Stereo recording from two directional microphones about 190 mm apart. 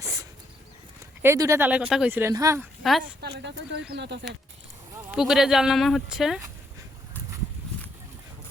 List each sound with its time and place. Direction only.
1.2 s speech: 15° right (ahead or behind)
3.2 s speech: 60° right (ahead or behind)
5.1 s speech: centre (ahead or behind)